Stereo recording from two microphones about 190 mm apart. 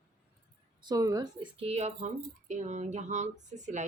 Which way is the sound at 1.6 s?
35° right (ahead or behind).